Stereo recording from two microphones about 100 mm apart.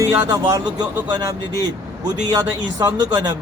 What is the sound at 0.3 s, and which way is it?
Speech, 35° right (ahead or behind).